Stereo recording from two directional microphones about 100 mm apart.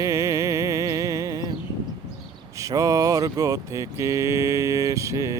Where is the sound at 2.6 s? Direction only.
35° right (ahead or behind).